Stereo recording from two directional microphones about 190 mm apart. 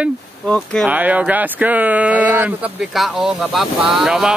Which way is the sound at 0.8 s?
5° right (ahead or behind).